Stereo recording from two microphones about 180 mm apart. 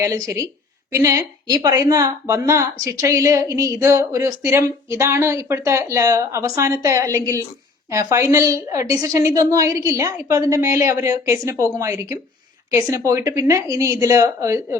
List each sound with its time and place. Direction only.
0.0 s a woman's voice: 20° right (ahead or behind)